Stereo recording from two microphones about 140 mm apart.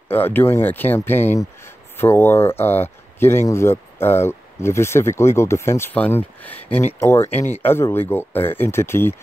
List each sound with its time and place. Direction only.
0.1 s speech: 15° left (ahead or behind)